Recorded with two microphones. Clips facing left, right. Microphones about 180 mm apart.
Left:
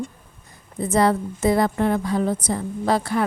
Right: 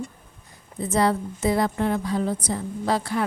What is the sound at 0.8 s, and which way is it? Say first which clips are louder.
Speech: left 3 dB; 50° left (ahead or behind).